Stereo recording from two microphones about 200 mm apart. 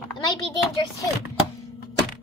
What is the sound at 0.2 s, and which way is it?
Speech, 20° left (ahead or behind).